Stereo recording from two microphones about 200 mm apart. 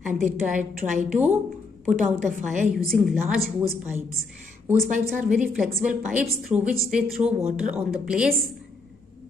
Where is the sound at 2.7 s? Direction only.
Centre (ahead or behind).